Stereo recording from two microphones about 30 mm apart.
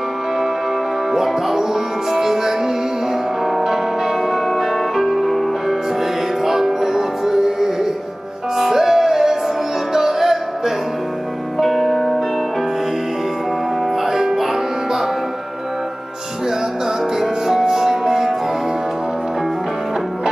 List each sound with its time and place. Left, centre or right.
1.1 s music: centre
6.4 s music: centre
14.0 s music: centre
17.2 s music: centre